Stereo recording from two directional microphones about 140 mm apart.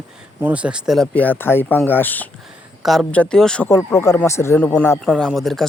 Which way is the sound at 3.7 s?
20° left (ahead or behind).